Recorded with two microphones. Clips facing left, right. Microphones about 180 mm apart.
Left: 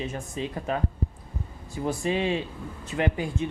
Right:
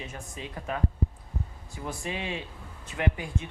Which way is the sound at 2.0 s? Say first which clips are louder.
Left 9 dB; 30° left (ahead or behind).